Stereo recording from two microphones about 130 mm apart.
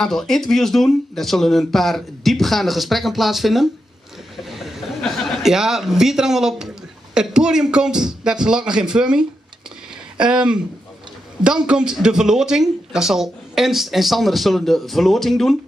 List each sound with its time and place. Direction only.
0.0 s speech: 5° left (ahead or behind)
4.4 s a sound: centre (ahead or behind)
7.2 s speech: 5° right (ahead or behind)